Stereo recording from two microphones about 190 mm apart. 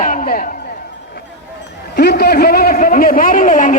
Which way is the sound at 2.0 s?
60° left (ahead or behind).